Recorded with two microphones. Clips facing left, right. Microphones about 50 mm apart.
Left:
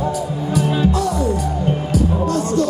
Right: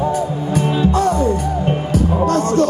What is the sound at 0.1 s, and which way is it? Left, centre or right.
Music, right.